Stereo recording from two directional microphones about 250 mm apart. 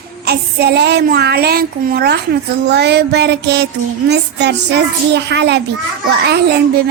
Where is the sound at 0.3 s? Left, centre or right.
Right.